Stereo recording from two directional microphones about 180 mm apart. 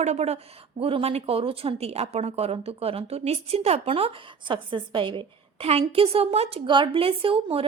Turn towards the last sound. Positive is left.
turn(degrees=-30)  # may be behind; listen again after turning